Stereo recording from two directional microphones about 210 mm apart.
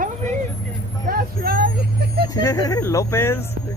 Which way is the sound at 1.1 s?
45° right (ahead or behind).